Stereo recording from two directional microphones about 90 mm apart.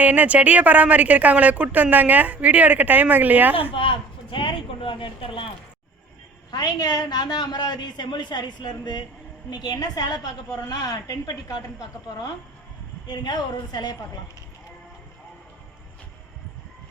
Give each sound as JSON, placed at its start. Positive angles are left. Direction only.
{"t": 0.0, "sound": "speech", "side_deg": -15}
{"t": 3.5, "sound": "speech", "side_deg": 80}
{"t": 6.5, "sound": "a woman's voice", "side_deg": 45}
{"t": 13.1, "sound": "a woman's voice", "side_deg": 50}